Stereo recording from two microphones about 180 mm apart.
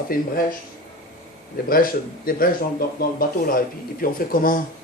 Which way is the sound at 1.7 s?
55° left (ahead or behind).